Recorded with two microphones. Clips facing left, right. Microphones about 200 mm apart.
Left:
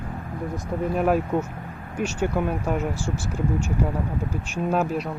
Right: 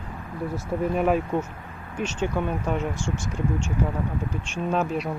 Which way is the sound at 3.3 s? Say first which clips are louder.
Left 3 dB; 10° left (ahead or behind).